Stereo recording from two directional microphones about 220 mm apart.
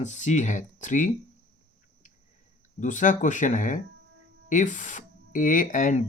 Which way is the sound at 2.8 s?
35° left (ahead or behind).